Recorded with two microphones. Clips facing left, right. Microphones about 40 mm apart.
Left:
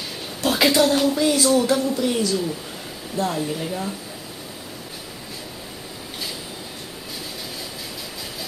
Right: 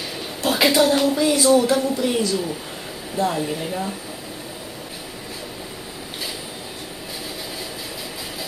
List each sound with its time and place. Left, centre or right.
0.5 s speech: centre
1.8 s speech: centre